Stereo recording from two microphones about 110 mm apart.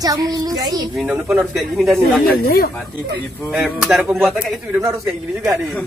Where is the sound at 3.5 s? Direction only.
5° right (ahead or behind).